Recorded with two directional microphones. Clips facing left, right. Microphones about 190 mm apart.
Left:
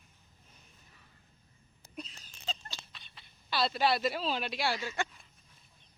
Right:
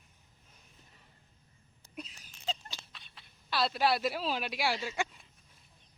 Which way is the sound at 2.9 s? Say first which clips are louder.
Even; centre (ahead or behind).